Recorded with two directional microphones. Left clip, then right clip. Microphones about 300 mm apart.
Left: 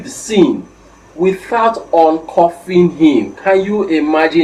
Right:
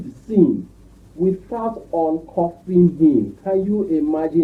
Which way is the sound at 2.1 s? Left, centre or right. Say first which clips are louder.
Left 10 dB; left.